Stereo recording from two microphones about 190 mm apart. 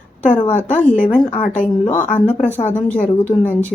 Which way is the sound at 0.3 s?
25° left (ahead or behind).